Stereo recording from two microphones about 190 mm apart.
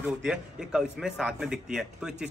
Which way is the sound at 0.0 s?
5° right (ahead or behind).